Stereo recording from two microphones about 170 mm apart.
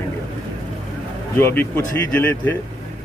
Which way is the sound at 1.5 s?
10° left (ahead or behind).